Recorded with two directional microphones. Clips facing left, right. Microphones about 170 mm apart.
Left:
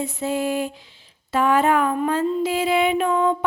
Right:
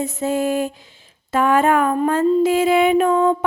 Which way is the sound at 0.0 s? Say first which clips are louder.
Right 3 dB; 45° right (ahead or behind).